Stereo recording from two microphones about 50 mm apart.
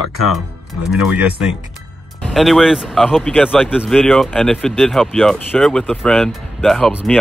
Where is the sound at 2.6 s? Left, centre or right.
Centre.